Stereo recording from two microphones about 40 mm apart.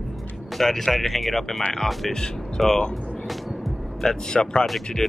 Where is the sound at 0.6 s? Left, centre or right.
Centre.